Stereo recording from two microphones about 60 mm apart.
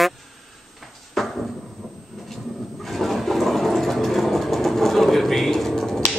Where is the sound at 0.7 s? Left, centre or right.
Centre.